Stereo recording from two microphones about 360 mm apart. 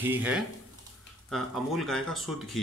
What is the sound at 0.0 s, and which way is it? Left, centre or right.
Speech, centre.